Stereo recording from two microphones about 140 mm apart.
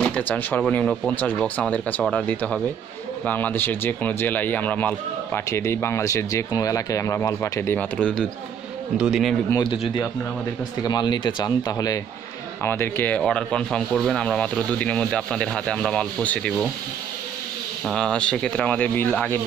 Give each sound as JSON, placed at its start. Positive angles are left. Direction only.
{"t": 0.0, "sound": "speech", "side_deg": 10}
{"t": 8.0, "sound": "speech", "side_deg": 5}
{"t": 10.8, "sound": "speech", "side_deg": 30}
{"t": 17.8, "sound": "speech", "side_deg": 5}